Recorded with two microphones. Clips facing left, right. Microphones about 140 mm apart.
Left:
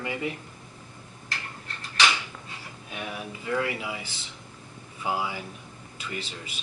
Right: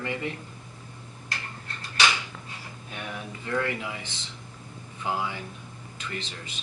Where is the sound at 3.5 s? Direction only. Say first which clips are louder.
Even; 15° left (ahead or behind).